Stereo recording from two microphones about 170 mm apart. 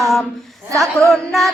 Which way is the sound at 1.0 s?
Centre (ahead or behind).